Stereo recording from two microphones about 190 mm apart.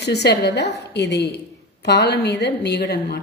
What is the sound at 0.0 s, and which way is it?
Speech, 60° left (ahead or behind).